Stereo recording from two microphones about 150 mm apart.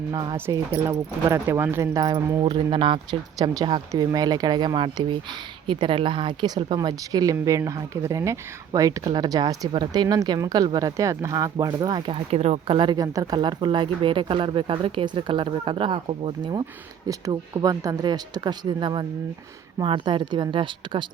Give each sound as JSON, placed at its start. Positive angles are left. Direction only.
{"t": 0.1, "sound": "speech", "side_deg": -30}
{"t": 0.3, "sound": "speech", "side_deg": -15}
{"t": 12.3, "sound": "speech", "side_deg": -45}